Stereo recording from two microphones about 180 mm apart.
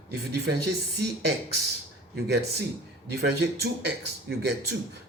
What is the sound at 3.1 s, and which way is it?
Speech, 65° right (ahead or behind).